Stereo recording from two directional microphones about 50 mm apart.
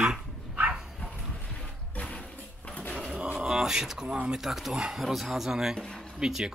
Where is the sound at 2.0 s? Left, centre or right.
Left.